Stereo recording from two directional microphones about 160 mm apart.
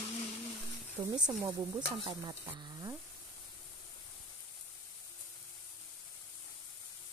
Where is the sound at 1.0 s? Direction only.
10° right (ahead or behind).